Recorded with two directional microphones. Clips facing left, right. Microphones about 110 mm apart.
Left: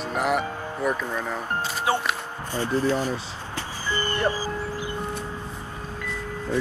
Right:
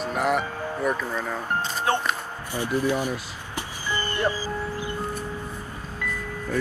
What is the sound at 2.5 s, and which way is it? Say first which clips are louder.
Speech: left 1 dB; 15° right (ahead or behind).